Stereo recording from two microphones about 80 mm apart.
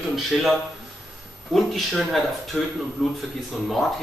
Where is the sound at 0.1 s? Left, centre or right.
Centre.